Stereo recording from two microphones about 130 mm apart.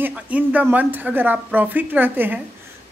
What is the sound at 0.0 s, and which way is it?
Speech, 10° right (ahead or behind).